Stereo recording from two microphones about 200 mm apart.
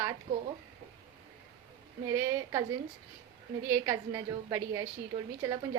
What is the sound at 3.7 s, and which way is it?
A woman's voice, 15° right (ahead or behind).